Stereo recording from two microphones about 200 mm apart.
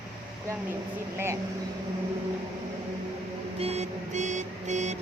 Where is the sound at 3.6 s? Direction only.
30° right (ahead or behind).